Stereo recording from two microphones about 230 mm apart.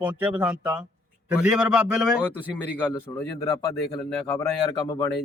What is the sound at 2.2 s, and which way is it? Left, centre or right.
Speech, centre.